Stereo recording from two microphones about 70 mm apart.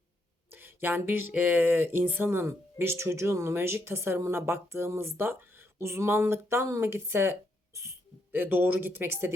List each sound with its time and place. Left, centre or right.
0.5 s a sound: right
1.3 s a woman's voice: right
8.3 s speech: right